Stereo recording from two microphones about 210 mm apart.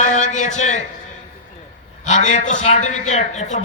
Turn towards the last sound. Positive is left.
turn(degrees=35)  # may be behind; listen again after turning